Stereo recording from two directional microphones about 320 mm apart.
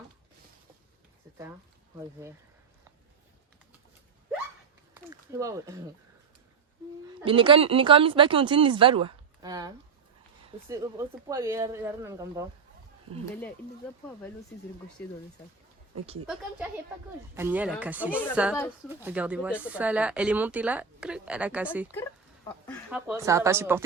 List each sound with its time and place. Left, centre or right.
4.9 s speech: centre
7.3 s speech: centre
15.0 s speech: centre
17.3 s speech: centre
18.1 s speech: centre